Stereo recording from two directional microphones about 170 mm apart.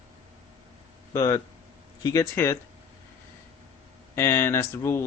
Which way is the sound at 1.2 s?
15° left (ahead or behind).